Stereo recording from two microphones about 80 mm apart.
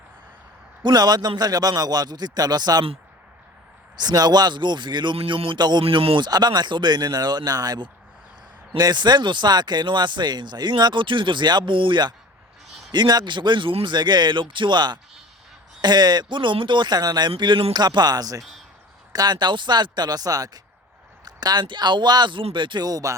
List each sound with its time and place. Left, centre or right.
0.8 s speech: right
3.9 s speech: right
8.8 s speech: right
12.9 s speech: right
21.2 s speech: right
22.9 s speech: right